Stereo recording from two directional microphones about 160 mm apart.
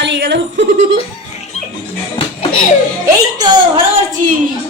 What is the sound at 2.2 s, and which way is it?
Music, 35° left (ahead or behind).